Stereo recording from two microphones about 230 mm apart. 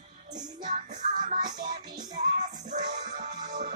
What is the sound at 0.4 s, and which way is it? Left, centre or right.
Music, right.